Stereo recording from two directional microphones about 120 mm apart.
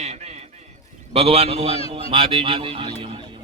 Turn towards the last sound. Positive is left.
turn(degrees=-45)  # may be behind; listen again after turning